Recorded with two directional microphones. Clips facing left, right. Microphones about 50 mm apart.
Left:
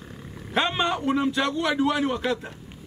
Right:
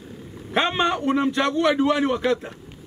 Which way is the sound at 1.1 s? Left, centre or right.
Centre.